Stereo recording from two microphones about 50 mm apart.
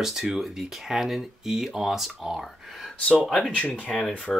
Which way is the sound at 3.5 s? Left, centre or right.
Left.